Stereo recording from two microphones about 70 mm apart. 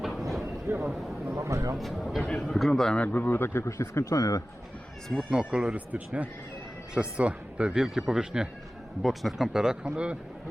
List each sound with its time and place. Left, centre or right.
0.0 s a sound: centre
0.8 s speech: centre
1.4 s speech: right
1.8 s a man's voice: centre
2.2 s a man's voice: centre
2.5 s a man's voice: centre
2.9 s speech: centre; by 4.4 s left
5.3 s speech: centre